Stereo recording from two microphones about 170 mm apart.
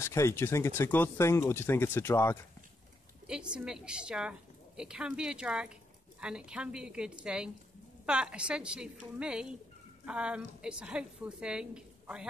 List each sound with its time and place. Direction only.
0.0 s speech: 15° left (ahead or behind)
3.3 s a woman's voice: 5° right (ahead or behind)